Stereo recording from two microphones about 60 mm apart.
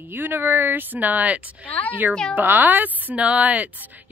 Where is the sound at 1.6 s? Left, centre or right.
Left.